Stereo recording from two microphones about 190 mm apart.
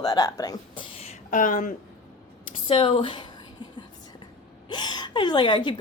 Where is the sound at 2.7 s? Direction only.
25° left (ahead or behind).